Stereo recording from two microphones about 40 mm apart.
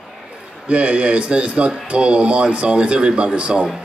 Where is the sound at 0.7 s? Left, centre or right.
Right.